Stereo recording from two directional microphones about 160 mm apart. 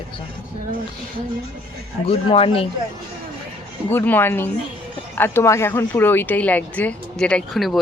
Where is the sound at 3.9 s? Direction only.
10° left (ahead or behind).